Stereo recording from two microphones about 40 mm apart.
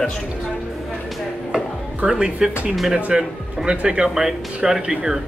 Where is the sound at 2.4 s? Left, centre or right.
Centre.